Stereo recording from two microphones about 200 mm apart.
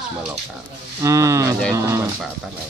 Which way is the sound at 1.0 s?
15° right (ahead or behind).